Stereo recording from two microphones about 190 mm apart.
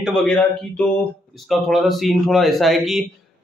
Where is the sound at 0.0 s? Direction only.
Centre (ahead or behind).